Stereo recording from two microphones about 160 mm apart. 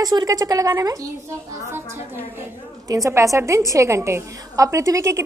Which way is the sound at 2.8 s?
20° right (ahead or behind).